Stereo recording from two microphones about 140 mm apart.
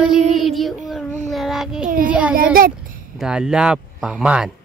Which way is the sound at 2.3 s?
90° right.